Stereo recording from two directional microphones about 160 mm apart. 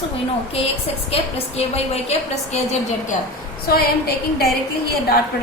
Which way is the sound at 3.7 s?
75° left (ahead or behind).